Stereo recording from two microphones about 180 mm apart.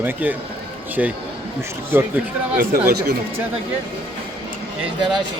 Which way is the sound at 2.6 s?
55° right (ahead or behind).